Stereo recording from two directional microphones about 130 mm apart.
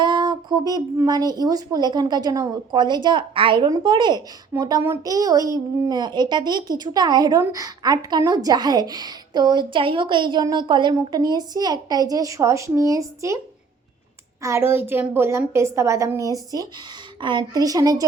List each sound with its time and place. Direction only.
0.0 s speech: 35° right (ahead or behind)
4.5 s a child's voice: 15° right (ahead or behind)
5.0 s a woman's voice: 30° right (ahead or behind)
14.4 s a woman's voice: 20° right (ahead or behind)